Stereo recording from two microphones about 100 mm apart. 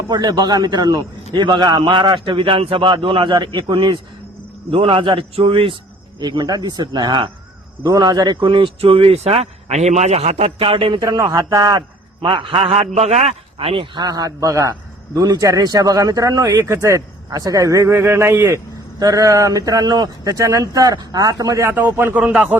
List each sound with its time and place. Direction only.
0.1 s a man's voice: 45° right (ahead or behind); by 5.7 s 70° right (ahead or behind)
6.1 s a man's voice: 45° right (ahead or behind)
11.0 s a man's voice: 40° right (ahead or behind)
12.2 s a man's voice: 55° right (ahead or behind); by 13.8 s 70° right (ahead or behind)
13.9 s a man's voice: 40° right (ahead or behind)
21.8 s speech: 20° right (ahead or behind)